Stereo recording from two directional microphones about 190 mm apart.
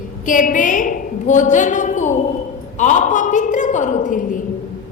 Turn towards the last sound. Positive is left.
turn(degrees=45)  # may be behind; listen again after turning